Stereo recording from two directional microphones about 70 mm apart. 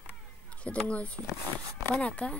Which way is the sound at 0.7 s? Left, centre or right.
Centre.